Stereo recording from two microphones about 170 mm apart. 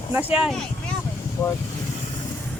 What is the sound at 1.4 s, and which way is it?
Speech, 20° left (ahead or behind).